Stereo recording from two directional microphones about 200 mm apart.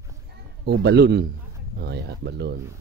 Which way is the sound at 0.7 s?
55° right (ahead or behind).